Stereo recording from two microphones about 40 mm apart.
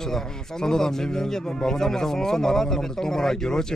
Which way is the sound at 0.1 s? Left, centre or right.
Centre.